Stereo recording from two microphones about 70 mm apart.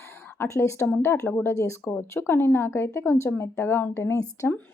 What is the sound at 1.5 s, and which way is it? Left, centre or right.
Speech, left.